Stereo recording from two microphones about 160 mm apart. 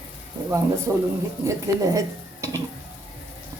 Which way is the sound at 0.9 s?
15° right (ahead or behind).